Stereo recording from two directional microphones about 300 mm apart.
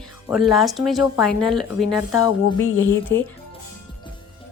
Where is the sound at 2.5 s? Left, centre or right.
Left.